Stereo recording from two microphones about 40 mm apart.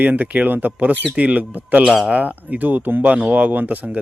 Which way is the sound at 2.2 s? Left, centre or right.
Right.